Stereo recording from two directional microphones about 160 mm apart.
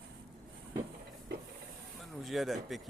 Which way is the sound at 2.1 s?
Centre (ahead or behind).